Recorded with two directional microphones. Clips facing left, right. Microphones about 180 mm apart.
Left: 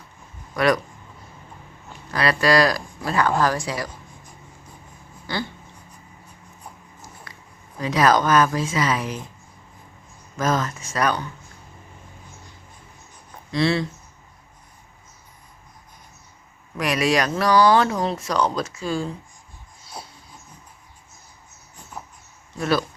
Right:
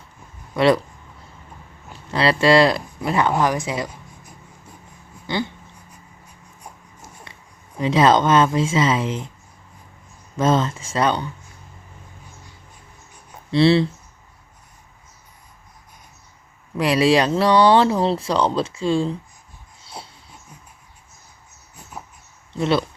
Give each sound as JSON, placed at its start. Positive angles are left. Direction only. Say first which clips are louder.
{"t": 0.5, "sound": "speech", "louder": "right 4 dB", "side_deg": -25}
{"t": 2.0, "sound": "speech", "louder": "right 4 dB", "side_deg": -25}
{"t": 5.2, "sound": "a sound", "louder": "right 4 dB", "side_deg": -20}
{"t": 7.3, "sound": "a sound", "louder": "even", "side_deg": -25}
{"t": 7.8, "sound": "speech", "louder": "right 3 dB", "side_deg": -25}
{"t": 10.3, "sound": "speech", "louder": "right 4 dB", "side_deg": -25}
{"t": 13.5, "sound": "speech", "louder": "right 6 dB", "side_deg": -30}
{"t": 16.7, "sound": "speech", "louder": "right 5 dB", "side_deg": -30}
{"t": 19.8, "sound": "dog", "louder": "right 1 dB", "side_deg": -25}
{"t": 22.5, "sound": "speech", "louder": "right 2 dB", "side_deg": -25}